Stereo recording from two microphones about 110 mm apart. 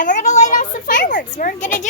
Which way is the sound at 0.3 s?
90° left.